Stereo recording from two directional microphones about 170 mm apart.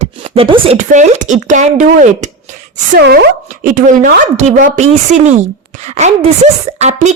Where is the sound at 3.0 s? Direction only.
70° right (ahead or behind).